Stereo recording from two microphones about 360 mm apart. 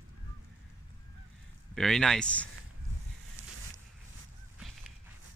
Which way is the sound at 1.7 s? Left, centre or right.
Centre.